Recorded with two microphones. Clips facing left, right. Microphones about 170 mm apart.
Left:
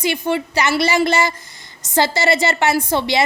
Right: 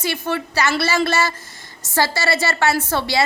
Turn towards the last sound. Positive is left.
turn(degrees=20)  # may be behind; listen again after turning